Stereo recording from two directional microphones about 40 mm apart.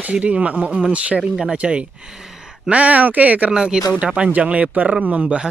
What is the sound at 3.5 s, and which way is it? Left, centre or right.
Speech, centre.